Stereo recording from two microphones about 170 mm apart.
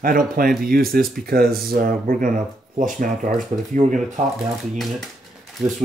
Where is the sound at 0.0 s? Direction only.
55° right (ahead or behind).